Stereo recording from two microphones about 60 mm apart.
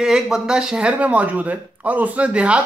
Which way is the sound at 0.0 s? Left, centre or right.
Centre.